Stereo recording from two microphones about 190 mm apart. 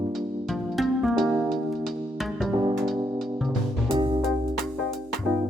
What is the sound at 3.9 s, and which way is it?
Music, 25° right (ahead or behind).